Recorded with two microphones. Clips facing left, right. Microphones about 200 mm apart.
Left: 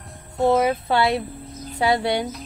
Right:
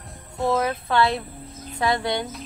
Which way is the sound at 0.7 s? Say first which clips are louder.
Left 2 dB; 20° left (ahead or behind).